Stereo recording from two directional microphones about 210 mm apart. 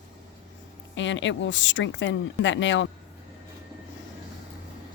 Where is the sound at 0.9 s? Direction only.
60° left (ahead or behind).